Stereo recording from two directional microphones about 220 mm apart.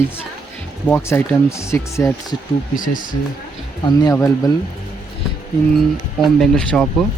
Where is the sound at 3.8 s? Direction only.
15° left (ahead or behind).